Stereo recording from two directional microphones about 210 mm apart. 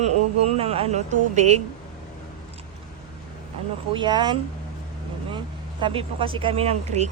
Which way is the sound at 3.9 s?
20° right (ahead or behind).